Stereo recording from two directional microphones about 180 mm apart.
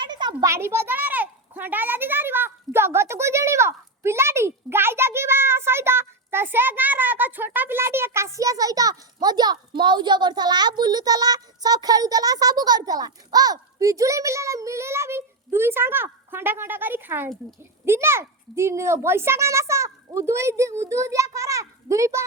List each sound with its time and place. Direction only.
0.0 s a child's voice: 25° right (ahead or behind)